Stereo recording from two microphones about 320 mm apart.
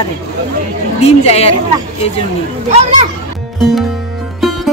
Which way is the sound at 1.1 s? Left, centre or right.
Centre.